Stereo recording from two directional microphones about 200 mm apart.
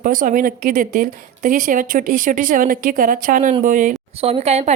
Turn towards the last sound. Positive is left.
turn(degrees=-35)  # may be behind; listen again after turning